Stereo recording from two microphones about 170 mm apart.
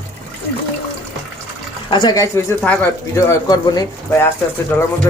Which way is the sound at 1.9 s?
25° left (ahead or behind).